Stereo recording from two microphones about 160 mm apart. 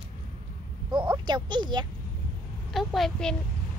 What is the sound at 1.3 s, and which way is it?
Speech, 30° right (ahead or behind).